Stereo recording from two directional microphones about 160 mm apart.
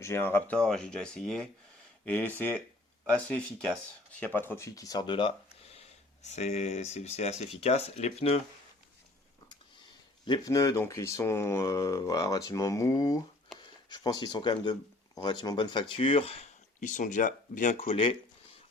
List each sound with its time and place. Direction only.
0.0 s speech: 15° left (ahead or behind); by 5.3 s 30° left (ahead or behind)
5.7 s speech: 45° left (ahead or behind)
10.2 s speech: 25° left (ahead or behind)